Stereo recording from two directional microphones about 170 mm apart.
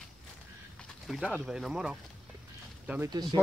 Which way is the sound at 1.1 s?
Centre (ahead or behind).